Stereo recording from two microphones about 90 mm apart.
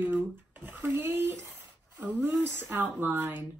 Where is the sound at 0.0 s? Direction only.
20° right (ahead or behind).